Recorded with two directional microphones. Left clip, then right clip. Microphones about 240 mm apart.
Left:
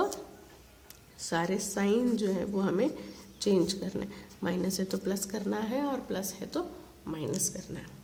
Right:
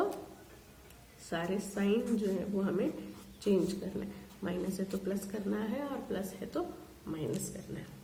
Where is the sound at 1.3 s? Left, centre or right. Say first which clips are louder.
Left 5 dB; left.